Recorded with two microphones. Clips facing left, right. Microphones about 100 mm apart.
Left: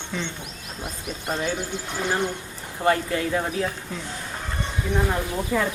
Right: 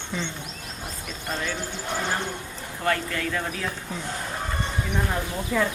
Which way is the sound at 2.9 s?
25° left (ahead or behind).